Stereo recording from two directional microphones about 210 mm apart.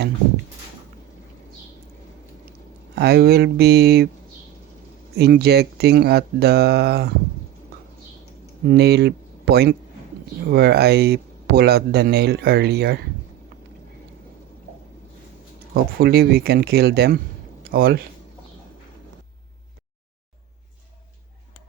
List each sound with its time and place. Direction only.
2.9 s speech: 50° right (ahead or behind)
5.1 s speech: 50° right (ahead or behind)
8.6 s speech: 50° right (ahead or behind)
15.7 s speech: 45° right (ahead or behind)